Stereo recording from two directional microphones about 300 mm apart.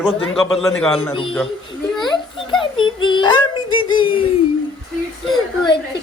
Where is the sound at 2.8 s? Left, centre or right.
Centre.